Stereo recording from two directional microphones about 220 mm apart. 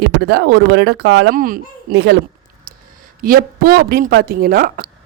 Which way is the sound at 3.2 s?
40° right (ahead or behind).